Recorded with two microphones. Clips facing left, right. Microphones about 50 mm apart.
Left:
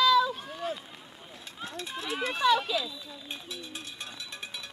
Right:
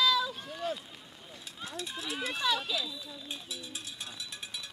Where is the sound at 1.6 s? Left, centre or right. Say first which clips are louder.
Left 2 dB; centre.